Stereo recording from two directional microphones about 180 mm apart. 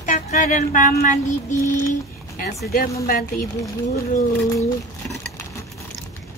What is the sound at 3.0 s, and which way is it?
Speech, 55° left (ahead or behind).